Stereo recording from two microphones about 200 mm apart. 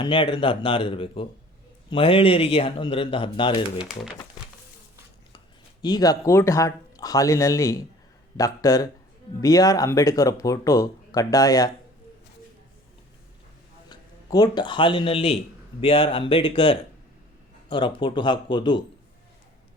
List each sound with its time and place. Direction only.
0.0 s speech: 25° left (ahead or behind)
3.8 s speech: 5° right (ahead or behind)
5.8 s speech: 20° left (ahead or behind)
13.9 s speech: 20° left (ahead or behind)